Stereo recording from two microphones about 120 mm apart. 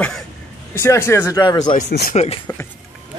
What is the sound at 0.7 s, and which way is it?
Speech, 20° left (ahead or behind).